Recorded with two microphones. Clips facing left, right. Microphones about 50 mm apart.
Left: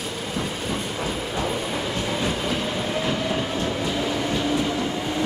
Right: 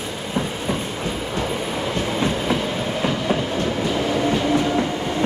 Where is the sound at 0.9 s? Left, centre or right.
Centre.